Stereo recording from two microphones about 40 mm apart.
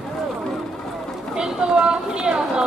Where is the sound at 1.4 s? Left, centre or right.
Centre.